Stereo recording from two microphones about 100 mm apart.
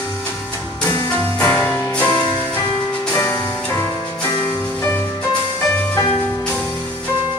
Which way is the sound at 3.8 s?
30° left (ahead or behind).